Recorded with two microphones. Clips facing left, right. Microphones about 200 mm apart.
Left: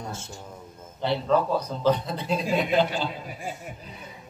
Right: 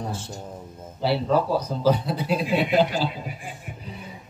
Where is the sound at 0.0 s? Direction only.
35° right (ahead or behind).